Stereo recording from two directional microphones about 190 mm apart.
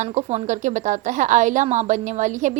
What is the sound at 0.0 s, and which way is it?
A woman's voice, 35° right (ahead or behind).